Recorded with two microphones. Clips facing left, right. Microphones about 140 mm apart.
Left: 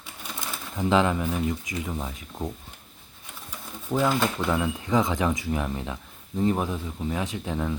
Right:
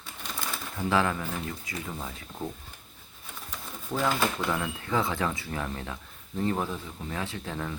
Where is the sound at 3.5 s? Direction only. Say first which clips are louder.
Left 5 dB; 10° left (ahead or behind).